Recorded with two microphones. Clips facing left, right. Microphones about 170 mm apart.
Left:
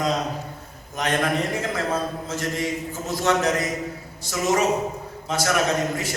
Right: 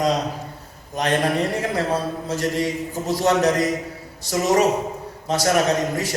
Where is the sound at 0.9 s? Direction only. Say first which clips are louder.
Right 3 dB; 35° right (ahead or behind).